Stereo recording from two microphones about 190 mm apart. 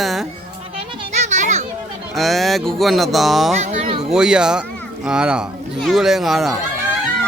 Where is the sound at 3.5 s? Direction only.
35° right (ahead or behind).